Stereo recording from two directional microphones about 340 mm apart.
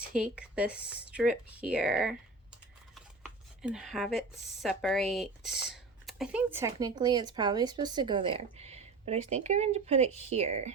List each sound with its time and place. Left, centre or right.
0.2 s speech: centre
3.6 s speech: centre